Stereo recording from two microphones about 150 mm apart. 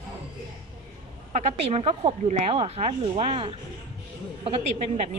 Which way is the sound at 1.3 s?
45° right (ahead or behind).